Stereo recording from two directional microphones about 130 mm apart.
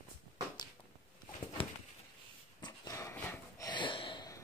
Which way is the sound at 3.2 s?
20° left (ahead or behind).